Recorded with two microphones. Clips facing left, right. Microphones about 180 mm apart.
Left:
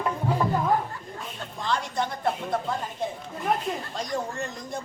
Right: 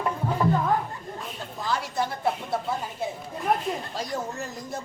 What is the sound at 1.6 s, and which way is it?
A woman's voice, 5° right (ahead or behind).